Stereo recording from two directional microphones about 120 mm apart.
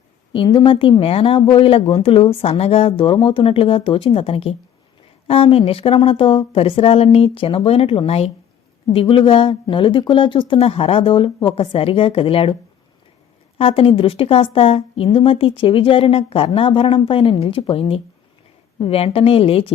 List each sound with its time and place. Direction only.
0.3 s speech: 45° left (ahead or behind)
13.6 s speech: 55° left (ahead or behind)